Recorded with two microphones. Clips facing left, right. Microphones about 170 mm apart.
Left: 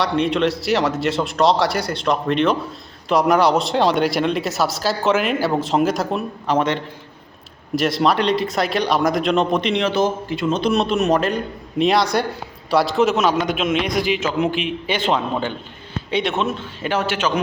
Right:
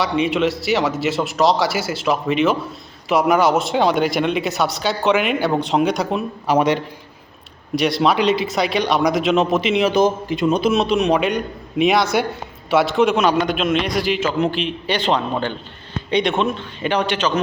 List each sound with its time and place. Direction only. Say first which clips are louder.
0.0 s speech: even; centre (ahead or behind)
6.5 s a man's voice: right 3 dB; 10° right (ahead or behind)
7.8 s speech: right 1 dB; centre (ahead or behind)
9.9 s a man's voice: right 3 dB; 15° right (ahead or behind)
10.6 s a man's voice: right 1 dB; centre (ahead or behind)